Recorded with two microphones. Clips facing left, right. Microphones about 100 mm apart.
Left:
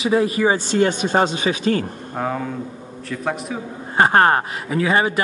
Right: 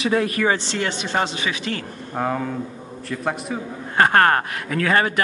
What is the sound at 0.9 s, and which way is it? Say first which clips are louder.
Speech: left 6 dB; 45° left (ahead or behind).